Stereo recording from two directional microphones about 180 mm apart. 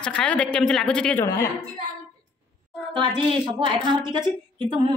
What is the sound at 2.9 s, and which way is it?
A woman's voice, 25° right (ahead or behind).